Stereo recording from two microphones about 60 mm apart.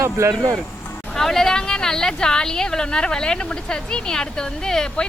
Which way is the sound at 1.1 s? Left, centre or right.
Centre.